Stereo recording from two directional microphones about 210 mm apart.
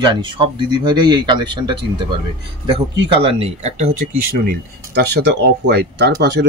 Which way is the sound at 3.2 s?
25° right (ahead or behind).